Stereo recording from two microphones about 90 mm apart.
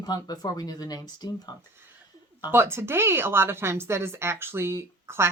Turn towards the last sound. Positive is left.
turn(degrees=-30)  # may be behind; listen again after turning